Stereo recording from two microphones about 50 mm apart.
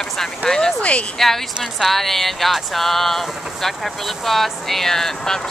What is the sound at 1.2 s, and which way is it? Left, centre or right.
Speech, centre.